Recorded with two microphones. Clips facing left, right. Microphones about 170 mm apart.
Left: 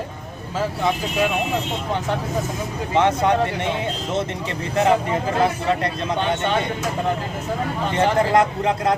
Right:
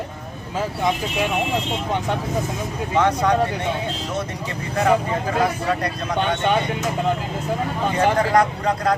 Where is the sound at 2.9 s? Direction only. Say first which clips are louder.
Left 1 dB; 25° left (ahead or behind).